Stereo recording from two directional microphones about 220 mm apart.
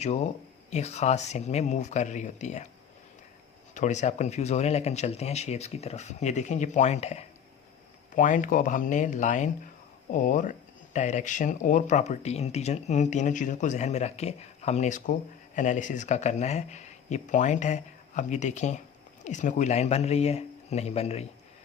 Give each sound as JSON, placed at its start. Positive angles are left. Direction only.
{"t": 0.0, "sound": "speech", "side_deg": 30}
{"t": 3.8, "sound": "speech", "side_deg": 35}